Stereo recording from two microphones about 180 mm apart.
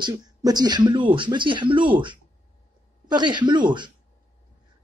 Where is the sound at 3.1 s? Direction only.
25° right (ahead or behind).